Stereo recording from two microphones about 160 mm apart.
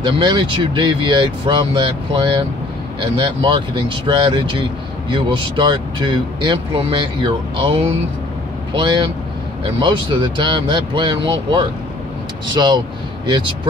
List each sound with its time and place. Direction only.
0.0 s speech: 30° right (ahead or behind)